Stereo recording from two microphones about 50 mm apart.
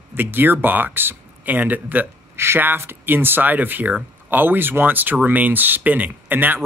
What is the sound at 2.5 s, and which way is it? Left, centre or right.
Speech, right.